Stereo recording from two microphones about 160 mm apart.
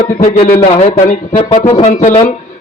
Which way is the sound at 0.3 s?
40° left (ahead or behind).